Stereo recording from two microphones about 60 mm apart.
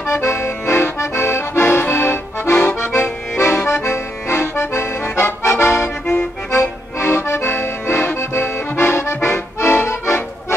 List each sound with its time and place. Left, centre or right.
0.3 s accordion: left